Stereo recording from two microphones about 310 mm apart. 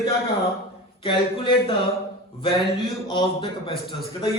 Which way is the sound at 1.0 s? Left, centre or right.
Centre.